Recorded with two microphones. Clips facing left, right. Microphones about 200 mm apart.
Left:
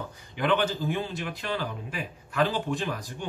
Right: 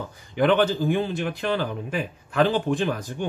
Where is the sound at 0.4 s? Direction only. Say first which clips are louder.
Right 6 dB; 45° right (ahead or behind).